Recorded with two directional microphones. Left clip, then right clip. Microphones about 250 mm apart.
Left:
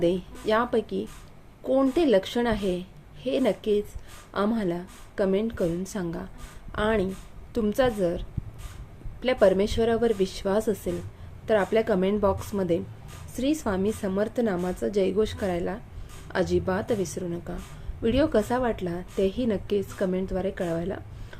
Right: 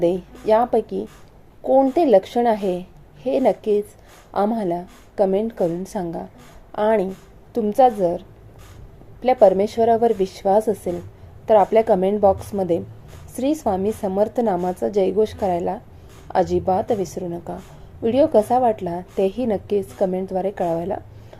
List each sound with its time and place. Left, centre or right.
0.0 s a woman's voice: centre